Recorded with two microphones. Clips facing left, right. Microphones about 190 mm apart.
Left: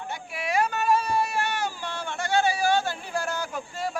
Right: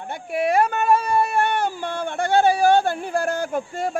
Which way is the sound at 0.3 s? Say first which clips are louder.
Right 7 dB; 55° right (ahead or behind).